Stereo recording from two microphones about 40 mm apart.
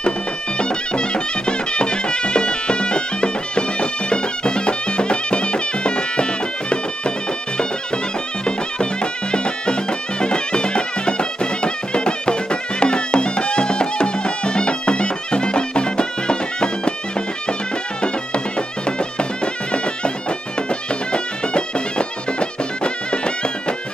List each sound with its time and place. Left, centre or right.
0.6 s music: left
8.5 s music: left
18.9 s bagpipes: left
20.9 s music: left